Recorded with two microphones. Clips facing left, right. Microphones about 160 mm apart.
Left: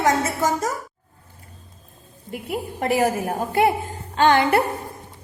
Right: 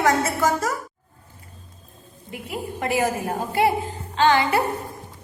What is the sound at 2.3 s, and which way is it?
Speech, 45° left (ahead or behind).